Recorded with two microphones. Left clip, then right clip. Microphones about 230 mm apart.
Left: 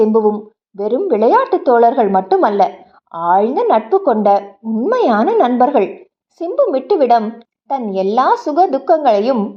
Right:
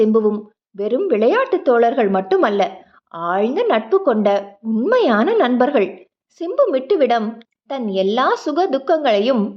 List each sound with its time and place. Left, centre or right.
0.2 s a woman's voice: centre
2.6 s a sound: centre
3.2 s a woman's voice: centre